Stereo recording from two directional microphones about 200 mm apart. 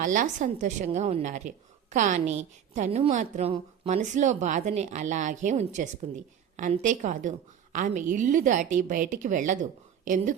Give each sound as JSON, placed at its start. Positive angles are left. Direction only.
{"t": 0.0, "sound": "a woman's voice", "side_deg": -40}